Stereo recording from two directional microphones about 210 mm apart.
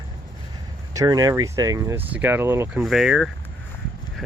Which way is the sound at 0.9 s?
15° right (ahead or behind).